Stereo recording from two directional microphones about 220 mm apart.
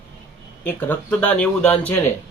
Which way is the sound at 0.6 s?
10° left (ahead or behind).